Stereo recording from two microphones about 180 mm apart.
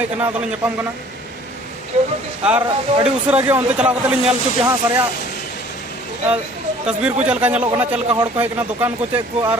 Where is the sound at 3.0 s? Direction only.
5° right (ahead or behind).